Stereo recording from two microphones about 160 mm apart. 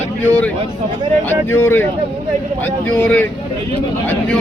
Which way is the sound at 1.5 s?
15° left (ahead or behind).